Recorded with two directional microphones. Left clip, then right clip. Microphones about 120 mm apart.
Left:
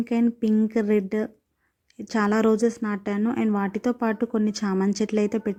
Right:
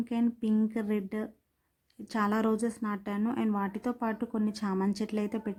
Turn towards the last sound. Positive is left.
turn(degrees=30)  # may be behind; listen again after turning